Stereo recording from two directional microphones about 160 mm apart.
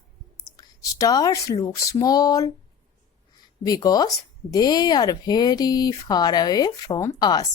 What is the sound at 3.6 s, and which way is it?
Speech, 25° left (ahead or behind).